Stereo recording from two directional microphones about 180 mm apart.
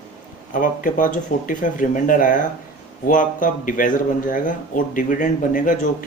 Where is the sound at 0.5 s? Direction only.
45° left (ahead or behind).